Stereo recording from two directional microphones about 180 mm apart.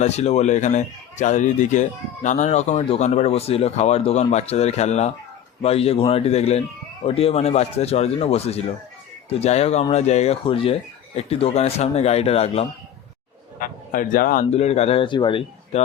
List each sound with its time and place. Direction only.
0.0 s speech: 35° left (ahead or behind)
13.6 s speech: 50° left (ahead or behind)
14.5 s speech: 35° left (ahead or behind)